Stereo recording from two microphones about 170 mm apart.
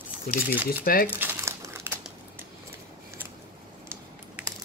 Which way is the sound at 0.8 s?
60° left (ahead or behind).